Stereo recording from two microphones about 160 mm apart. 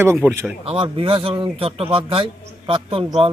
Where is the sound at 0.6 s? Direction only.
35° right (ahead or behind).